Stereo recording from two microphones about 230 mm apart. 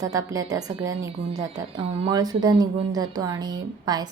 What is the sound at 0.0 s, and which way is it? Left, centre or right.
A woman's voice, centre.